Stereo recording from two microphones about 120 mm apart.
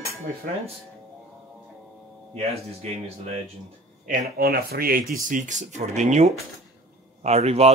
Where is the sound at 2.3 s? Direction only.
60° right (ahead or behind).